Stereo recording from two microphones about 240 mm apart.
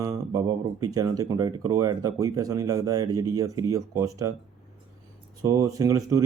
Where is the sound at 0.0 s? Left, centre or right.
Centre.